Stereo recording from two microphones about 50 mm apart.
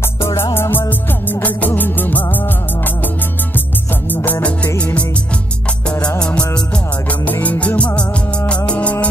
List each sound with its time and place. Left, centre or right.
0.2 s music: left
4.1 s music: left; by 6.6 s centre
7.4 s music: left